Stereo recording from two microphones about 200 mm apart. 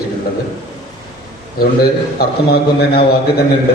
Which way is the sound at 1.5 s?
50° left (ahead or behind).